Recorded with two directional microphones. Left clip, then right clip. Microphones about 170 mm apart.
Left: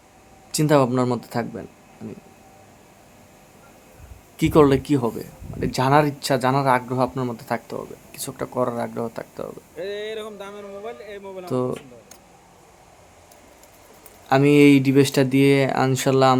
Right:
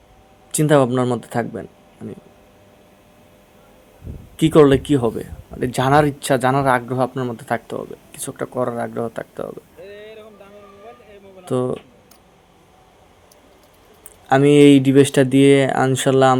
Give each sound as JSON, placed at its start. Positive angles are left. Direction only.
{"t": 0.5, "sound": "speech", "side_deg": -10}
{"t": 4.4, "sound": "speech", "side_deg": -10}
{"t": 9.8, "sound": "a sound", "side_deg": 55}
{"t": 11.4, "sound": "speech", "side_deg": -15}
{"t": 14.3, "sound": "speech", "side_deg": -10}